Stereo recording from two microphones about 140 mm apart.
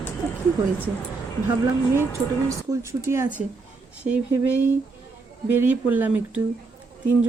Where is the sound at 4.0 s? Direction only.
10° right (ahead or behind).